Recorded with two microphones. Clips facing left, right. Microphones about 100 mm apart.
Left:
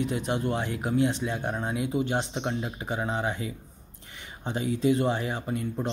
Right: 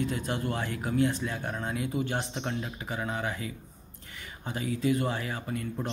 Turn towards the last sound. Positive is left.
turn(degrees=25)  # may be behind; listen again after turning